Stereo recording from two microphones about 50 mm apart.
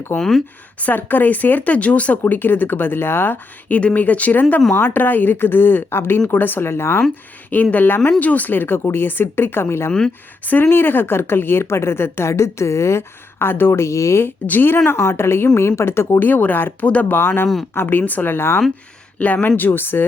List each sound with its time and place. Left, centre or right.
0.2 s speech: centre
0.8 s speech: left
2.2 s speech: left
3.8 s speech: left
7.5 s speech: left
10.4 s speech: left
12.3 s speech: left
13.7 s speech: left
14.4 s speech: left
14.8 s speech: left
16.2 s speech: left
16.8 s speech: left
17.1 s speech: left
19.2 s speech: left